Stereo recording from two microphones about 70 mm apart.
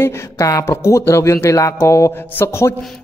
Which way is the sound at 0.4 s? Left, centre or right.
Left.